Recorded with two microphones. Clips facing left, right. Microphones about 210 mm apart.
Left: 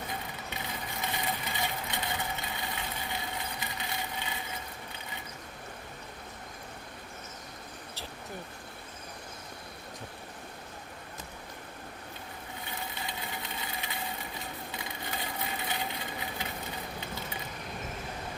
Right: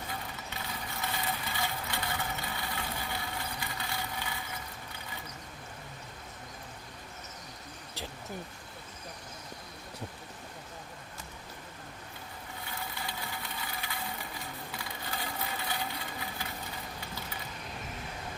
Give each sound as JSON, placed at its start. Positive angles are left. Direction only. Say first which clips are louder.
{"t": 1.0, "sound": "vehicle", "louder": "left 1 dB", "side_deg": 20}
{"t": 12.9, "sound": "engine", "louder": "left 1 dB", "side_deg": 20}
{"t": 14.7, "sound": "crushing", "louder": "left 1 dB", "side_deg": 20}